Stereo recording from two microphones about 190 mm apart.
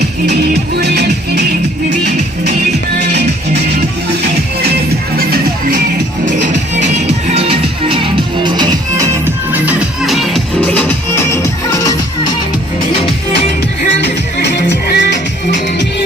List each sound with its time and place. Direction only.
0.8 s music: 60° right (ahead or behind)
3.0 s music: 60° right (ahead or behind)
5.1 s music: 50° right (ahead or behind)
6.4 s music: 40° right (ahead or behind); by 9.0 s 20° right (ahead or behind)
9.2 s music: 10° right (ahead or behind)
14.0 s music: 65° left (ahead or behind)